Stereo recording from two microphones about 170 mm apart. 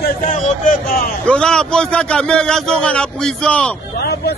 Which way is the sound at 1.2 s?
5° left (ahead or behind).